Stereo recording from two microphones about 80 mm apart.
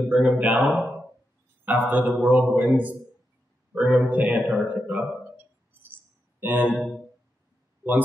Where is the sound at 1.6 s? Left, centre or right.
Right.